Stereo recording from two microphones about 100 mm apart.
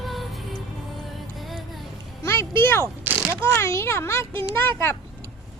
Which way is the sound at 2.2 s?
25° left (ahead or behind).